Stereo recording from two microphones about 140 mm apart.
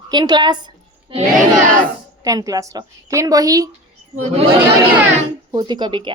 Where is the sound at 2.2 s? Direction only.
25° right (ahead or behind).